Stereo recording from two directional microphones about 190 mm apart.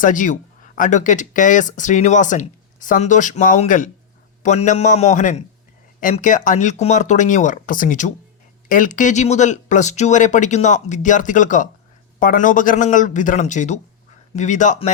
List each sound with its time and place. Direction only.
0.0 s a man's voice: 45° left (ahead or behind)